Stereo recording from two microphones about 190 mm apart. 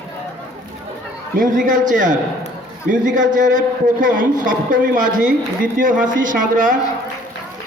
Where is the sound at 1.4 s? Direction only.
45° right (ahead or behind).